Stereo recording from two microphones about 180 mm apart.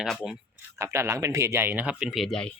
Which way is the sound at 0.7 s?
15° right (ahead or behind).